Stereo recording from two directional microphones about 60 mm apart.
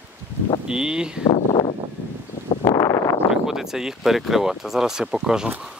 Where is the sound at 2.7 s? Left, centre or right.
Left.